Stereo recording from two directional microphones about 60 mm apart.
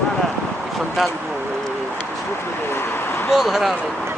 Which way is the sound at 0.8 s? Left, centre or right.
Centre.